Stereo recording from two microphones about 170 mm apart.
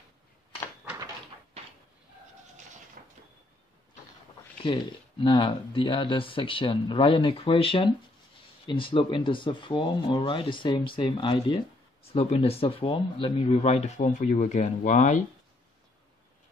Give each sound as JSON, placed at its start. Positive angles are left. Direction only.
{"t": 3.0, "sound": "train", "side_deg": -55}
{"t": 4.7, "sound": "speech", "side_deg": 30}